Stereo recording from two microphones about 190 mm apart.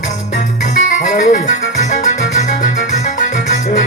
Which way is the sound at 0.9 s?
45° left (ahead or behind).